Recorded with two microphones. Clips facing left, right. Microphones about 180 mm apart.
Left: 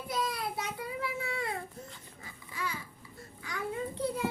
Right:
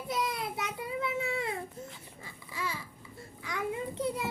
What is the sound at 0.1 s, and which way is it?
Child singing, 20° right (ahead or behind).